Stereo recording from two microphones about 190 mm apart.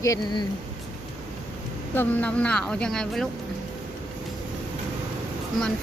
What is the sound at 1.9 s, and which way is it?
Speech, 5° left (ahead or behind).